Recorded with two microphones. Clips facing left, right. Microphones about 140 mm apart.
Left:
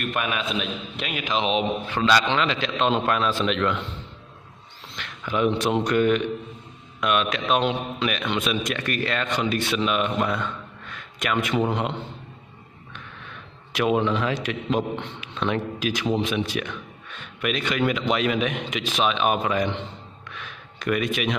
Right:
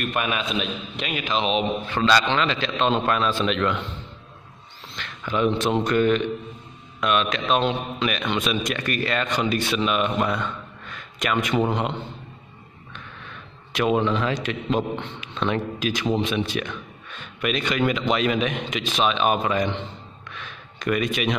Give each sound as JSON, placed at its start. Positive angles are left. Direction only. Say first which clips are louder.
{"t": 0.1, "sound": "a man's voice", "louder": "right 1 dB", "side_deg": 0}
{"t": 1.2, "sound": "a man's voice", "louder": "even", "side_deg": 15}
{"t": 1.9, "sound": "a man's voice", "louder": "right 1 dB", "side_deg": 5}
{"t": 4.9, "sound": "a man's voice", "louder": "even", "side_deg": 5}
{"t": 13.7, "sound": "a man's voice", "louder": "right 1 dB", "side_deg": 5}
{"t": 20.3, "sound": "a sound", "louder": "right 1 dB", "side_deg": 5}